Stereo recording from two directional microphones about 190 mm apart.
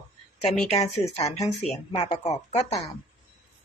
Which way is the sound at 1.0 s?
15° left (ahead or behind).